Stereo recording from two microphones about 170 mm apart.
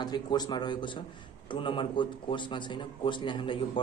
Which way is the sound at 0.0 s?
25° left (ahead or behind).